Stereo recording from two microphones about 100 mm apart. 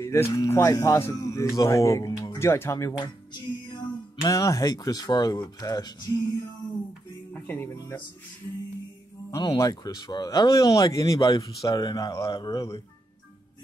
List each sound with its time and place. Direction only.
0.0 s speech: 25° left (ahead or behind)
3.0 s speech: 45° left (ahead or behind)
7.3 s music: 20° left (ahead or behind)
9.4 s speech: 40° left (ahead or behind)